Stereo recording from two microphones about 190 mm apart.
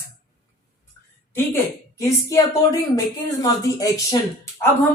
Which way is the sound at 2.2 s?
15° left (ahead or behind).